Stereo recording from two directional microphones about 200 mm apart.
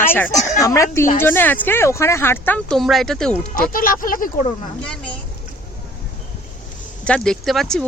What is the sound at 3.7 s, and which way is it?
Speech, 45° left (ahead or behind).